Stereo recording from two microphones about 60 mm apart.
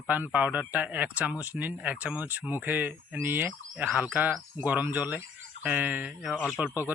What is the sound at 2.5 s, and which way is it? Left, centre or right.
Insect, right.